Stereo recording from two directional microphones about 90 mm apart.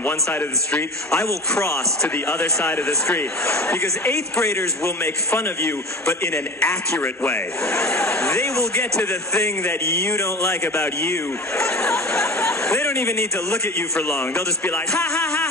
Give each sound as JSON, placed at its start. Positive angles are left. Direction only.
{"t": 0.7, "sound": "speech", "side_deg": 10}
{"t": 4.5, "sound": "speech", "side_deg": 30}
{"t": 6.6, "sound": "speech", "side_deg": 5}
{"t": 10.1, "sound": "speech", "side_deg": 30}
{"t": 11.5, "sound": "speech", "side_deg": 5}
{"t": 12.8, "sound": "speech", "side_deg": 30}
{"t": 13.9, "sound": "speech", "side_deg": 10}